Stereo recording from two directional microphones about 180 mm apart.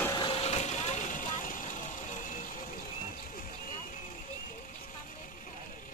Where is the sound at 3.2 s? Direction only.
50° left (ahead or behind).